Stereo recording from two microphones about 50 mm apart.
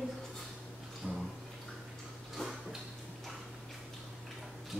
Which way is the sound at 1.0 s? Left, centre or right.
Centre.